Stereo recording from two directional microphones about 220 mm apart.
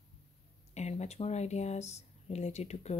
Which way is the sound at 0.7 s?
30° left (ahead or behind).